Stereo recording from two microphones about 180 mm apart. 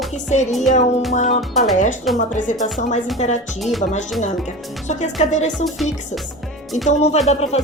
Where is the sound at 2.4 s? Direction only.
45° left (ahead or behind).